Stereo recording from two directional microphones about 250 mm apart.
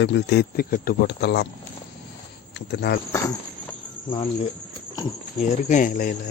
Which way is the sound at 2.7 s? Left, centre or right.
Left.